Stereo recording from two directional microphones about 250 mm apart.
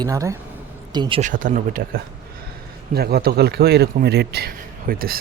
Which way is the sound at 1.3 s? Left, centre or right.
Right.